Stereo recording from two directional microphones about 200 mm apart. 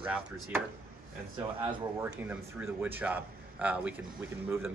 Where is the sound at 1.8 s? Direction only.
15° right (ahead or behind).